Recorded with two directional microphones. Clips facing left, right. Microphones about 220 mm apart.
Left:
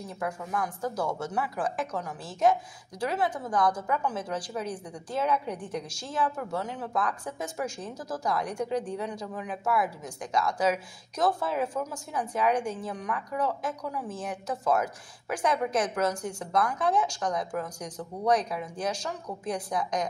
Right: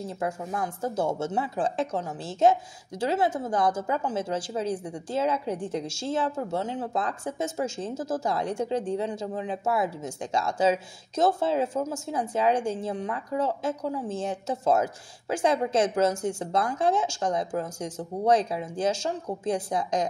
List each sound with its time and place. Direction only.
0.2 s speech: 25° right (ahead or behind)